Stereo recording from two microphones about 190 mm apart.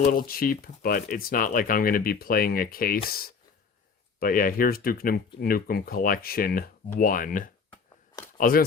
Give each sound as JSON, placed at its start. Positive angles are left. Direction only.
{"t": 0.3, "sound": "speech", "side_deg": 50}